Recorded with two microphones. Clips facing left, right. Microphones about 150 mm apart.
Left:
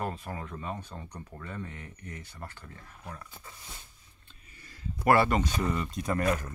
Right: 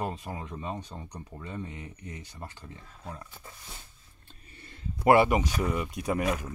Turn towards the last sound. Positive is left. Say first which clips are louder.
# even
turn(degrees=-5)  # may be behind; listen again after turning